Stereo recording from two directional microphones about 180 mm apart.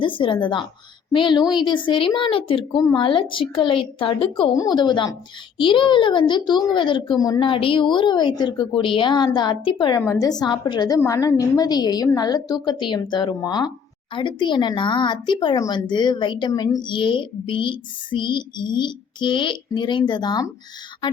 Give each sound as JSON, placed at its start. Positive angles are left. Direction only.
{"t": 0.0, "sound": "speech", "side_deg": 30}